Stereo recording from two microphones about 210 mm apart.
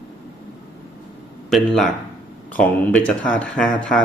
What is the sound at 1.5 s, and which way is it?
Speech, centre (ahead or behind).